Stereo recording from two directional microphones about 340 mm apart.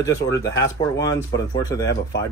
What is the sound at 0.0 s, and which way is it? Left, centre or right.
Speech, centre.